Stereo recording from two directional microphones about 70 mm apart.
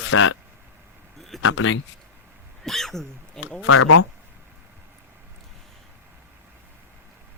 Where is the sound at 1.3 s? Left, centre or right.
Centre.